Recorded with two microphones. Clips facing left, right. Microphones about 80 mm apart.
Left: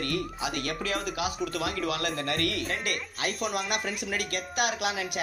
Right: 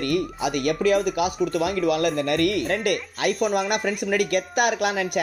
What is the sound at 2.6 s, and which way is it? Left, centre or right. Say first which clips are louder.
Speech: right 9 dB; right.